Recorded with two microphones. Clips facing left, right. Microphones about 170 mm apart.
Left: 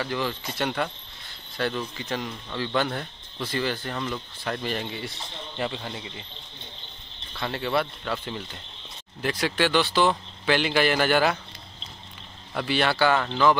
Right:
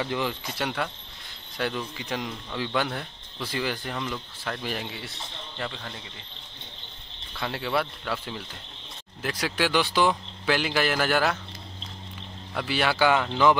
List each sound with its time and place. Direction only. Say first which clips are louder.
0.0 s speech: even; 20° right (ahead or behind)
0.6 s speech: left 3 dB; 5° right (ahead or behind)
5.6 s speech: left 5 dB; 15° left (ahead or behind)
7.3 s speech: left 2 dB; 5° right (ahead or behind)
12.5 s speech: left 1 dB; 5° right (ahead or behind)